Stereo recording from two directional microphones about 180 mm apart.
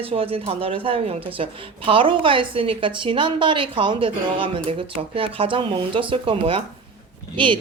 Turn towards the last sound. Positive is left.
turn(degrees=-30)  # may be behind; listen again after turning